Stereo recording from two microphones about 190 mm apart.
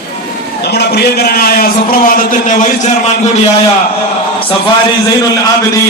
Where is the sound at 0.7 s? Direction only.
55° left (ahead or behind); by 2.7 s 40° left (ahead or behind).